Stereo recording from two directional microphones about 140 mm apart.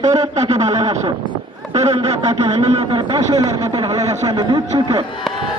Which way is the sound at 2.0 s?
30° right (ahead or behind).